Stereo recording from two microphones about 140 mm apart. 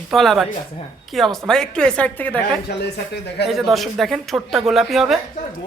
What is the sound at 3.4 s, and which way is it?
Speech, centre (ahead or behind).